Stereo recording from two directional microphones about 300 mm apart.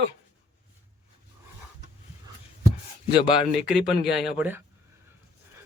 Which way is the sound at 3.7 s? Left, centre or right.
Centre.